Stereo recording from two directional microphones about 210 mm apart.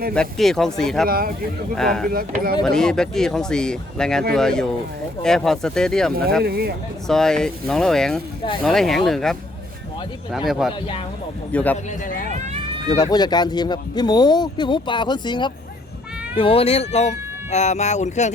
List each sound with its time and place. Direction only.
0.1 s speech: 5° left (ahead or behind)
1.0 s speech: 45° right (ahead or behind)
1.7 s speech: centre (ahead or behind)
2.0 s speech: 45° right (ahead or behind)
2.6 s speech: 5° left (ahead or behind)
6.4 s speech: 50° right (ahead or behind)
7.1 s a man's voice: centre (ahead or behind)
12.0 s speech: 40° left (ahead or behind)
13.0 s speech: 20° left (ahead or behind)